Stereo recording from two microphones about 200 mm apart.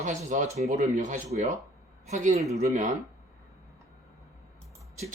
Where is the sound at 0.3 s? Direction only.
35° right (ahead or behind).